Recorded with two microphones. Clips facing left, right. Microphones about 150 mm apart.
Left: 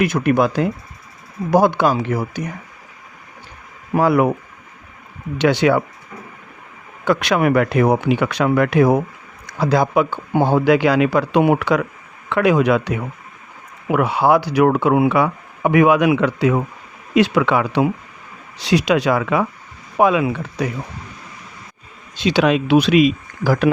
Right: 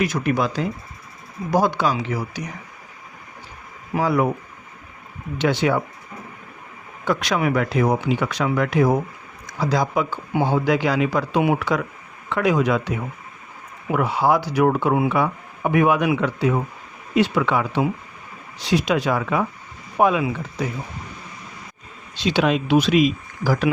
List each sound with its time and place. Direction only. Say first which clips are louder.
0.0 s speech: left 5 dB; 55° left (ahead or behind)
3.9 s speech: left 5 dB; 65° left (ahead or behind)
5.4 s speech: left 5 dB; 75° left (ahead or behind)
7.0 s speech: left 5 dB; 70° left (ahead or behind)
22.3 s speech: left 4 dB; 85° left; by 23.7 s 60° left (ahead or behind)